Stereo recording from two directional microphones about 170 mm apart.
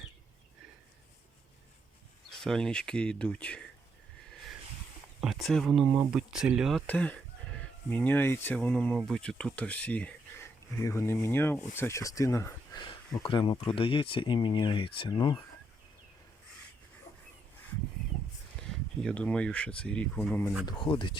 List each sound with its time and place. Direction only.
2.3 s speech: 5° left (ahead or behind)
5.2 s speech: centre (ahead or behind)
5.8 s speech: 20° right (ahead or behind)
6.1 s speech: 5° right (ahead or behind)
6.8 s speech: 10° left (ahead or behind)
13.2 s speech: 30° left (ahead or behind)
19.0 s speech: 5° left (ahead or behind)
20.7 s speech: 30° left (ahead or behind)